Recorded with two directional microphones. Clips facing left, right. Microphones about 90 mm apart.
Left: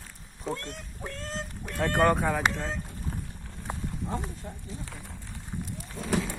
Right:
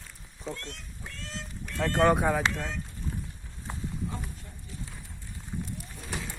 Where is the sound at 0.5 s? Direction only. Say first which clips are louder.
Left 4 dB; 45° left (ahead or behind).